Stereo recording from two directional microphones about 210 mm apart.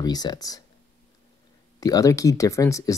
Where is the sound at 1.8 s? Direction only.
15° left (ahead or behind).